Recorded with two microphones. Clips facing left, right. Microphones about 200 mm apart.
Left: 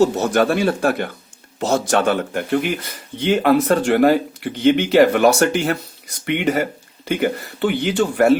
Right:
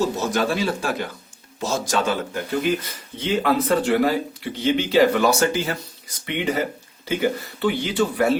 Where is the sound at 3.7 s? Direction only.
50° left (ahead or behind).